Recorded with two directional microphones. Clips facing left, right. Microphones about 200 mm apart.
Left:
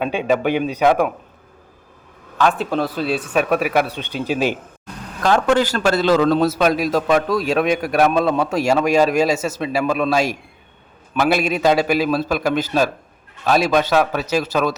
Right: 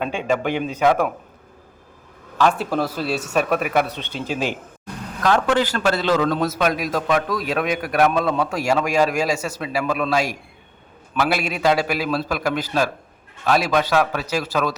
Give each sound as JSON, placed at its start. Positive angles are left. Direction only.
{"t": 0.0, "sound": "speech", "side_deg": 15}
{"t": 2.4, "sound": "speech", "side_deg": -5}
{"t": 3.3, "sound": "speech", "side_deg": 5}
{"t": 5.2, "sound": "a man's voice", "side_deg": 40}